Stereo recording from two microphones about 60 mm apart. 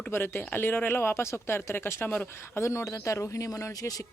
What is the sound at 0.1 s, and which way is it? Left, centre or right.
Speech, left.